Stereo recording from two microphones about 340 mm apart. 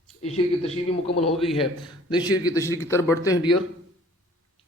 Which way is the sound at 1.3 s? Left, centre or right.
Centre.